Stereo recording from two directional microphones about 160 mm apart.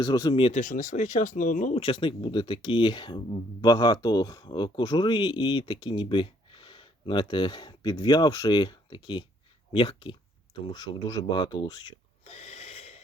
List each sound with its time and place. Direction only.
0.0 s speech: 25° left (ahead or behind)
0.6 s speech: 55° left (ahead or behind)
1.8 s speech: 35° left (ahead or behind)
12.2 s gasp: 45° left (ahead or behind)